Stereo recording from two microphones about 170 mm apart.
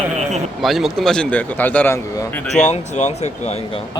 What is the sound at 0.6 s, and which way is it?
A man's voice, centre (ahead or behind).